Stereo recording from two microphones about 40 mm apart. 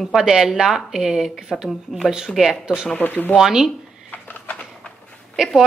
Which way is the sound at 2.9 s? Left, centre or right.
Left.